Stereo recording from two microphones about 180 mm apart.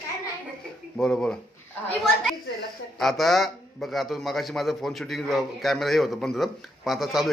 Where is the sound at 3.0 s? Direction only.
Centre (ahead or behind).